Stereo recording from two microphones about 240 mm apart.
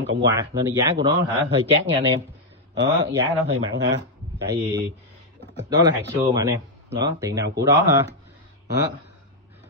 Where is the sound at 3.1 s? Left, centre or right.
Right.